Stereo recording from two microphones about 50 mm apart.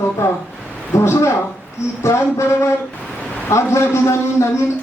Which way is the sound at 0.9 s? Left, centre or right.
Left.